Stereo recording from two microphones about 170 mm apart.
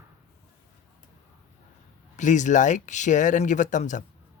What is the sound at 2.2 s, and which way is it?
Speech, 45° left (ahead or behind).